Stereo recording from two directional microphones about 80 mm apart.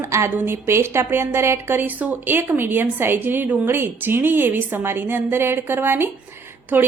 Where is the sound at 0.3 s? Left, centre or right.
Right.